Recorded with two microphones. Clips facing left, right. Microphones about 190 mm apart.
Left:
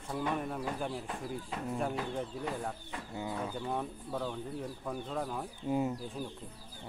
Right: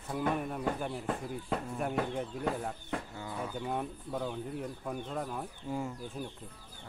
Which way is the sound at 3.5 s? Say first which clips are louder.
Right 1 dB; 5° right (ahead or behind).